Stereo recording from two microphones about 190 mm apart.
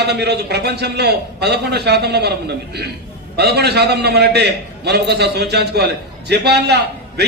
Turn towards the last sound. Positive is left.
turn(degrees=-60)  # may be behind; listen again after turning